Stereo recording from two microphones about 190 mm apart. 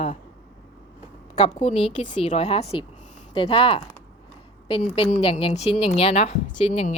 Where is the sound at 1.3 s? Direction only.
30° left (ahead or behind).